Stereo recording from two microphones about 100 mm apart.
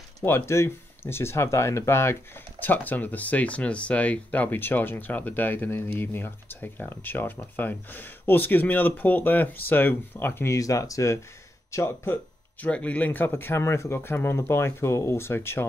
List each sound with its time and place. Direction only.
0.2 s speech: 25° left (ahead or behind)